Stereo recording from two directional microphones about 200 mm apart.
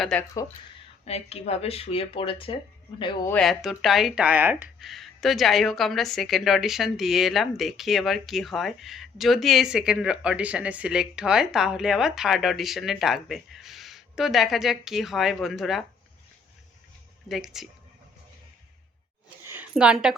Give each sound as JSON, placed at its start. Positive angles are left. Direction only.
{"t": 0.0, "sound": "speech", "side_deg": 5}
{"t": 1.0, "sound": "speech", "side_deg": 30}
{"t": 3.2, "sound": "speech", "side_deg": 5}
{"t": 17.2, "sound": "speech", "side_deg": 0}
{"t": 19.5, "sound": "a sound", "side_deg": -5}